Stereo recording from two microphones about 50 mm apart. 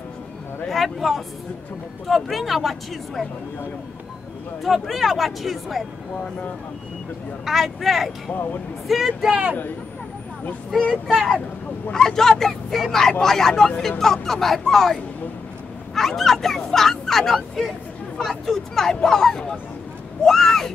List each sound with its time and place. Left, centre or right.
0.7 s speech: centre
4.6 s speech: centre
7.4 s speech: centre
9.3 s speech: right
11.9 s speech: centre